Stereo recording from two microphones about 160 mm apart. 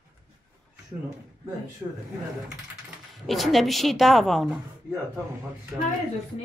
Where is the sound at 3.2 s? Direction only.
Centre (ahead or behind).